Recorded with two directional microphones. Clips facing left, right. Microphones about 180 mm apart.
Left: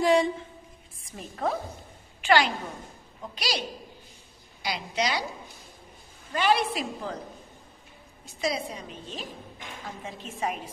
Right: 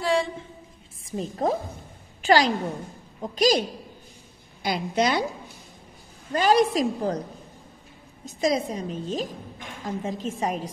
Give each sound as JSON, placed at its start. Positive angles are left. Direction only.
{"t": 0.0, "sound": "a sound", "side_deg": 15}
{"t": 1.1, "sound": "a woman's voice", "side_deg": -35}
{"t": 4.6, "sound": "a woman's voice", "side_deg": -50}
{"t": 6.3, "sound": "a woman's voice", "side_deg": -40}
{"t": 8.3, "sound": "a woman's voice", "side_deg": -45}